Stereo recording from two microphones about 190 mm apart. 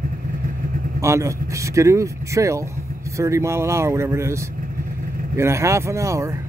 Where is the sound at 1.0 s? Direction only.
15° right (ahead or behind).